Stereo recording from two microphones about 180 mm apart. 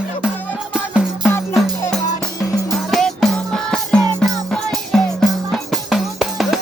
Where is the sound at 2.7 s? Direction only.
Centre (ahead or behind).